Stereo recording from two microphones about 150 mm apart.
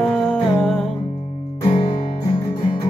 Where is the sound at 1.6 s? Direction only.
30° left (ahead or behind).